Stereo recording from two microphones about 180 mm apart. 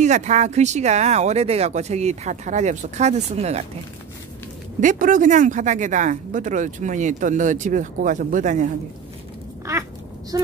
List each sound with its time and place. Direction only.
0.0 s speech: 40° right (ahead or behind)
4.7 s speech: 45° right (ahead or behind)
9.7 s speech: 15° right (ahead or behind)